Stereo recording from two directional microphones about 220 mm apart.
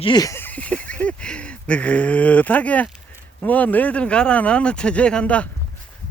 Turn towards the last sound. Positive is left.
turn(degrees=5)  # may be behind; listen again after turning